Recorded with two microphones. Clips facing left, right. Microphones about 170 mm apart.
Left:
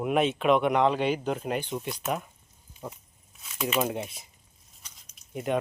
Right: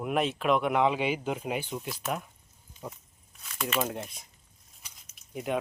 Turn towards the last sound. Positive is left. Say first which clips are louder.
# left 3 dB
turn(degrees=0)  # may be behind; listen again after turning